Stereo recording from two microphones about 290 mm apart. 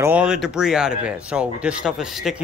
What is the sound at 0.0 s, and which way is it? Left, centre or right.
Speech, centre.